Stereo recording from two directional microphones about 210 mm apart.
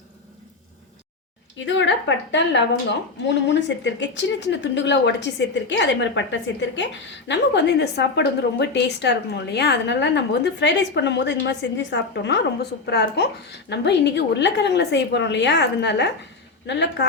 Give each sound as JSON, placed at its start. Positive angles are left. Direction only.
{"t": 1.5, "sound": "a woman's voice", "side_deg": 60}